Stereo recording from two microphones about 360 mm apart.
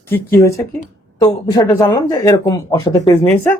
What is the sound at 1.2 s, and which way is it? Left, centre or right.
Speech, centre.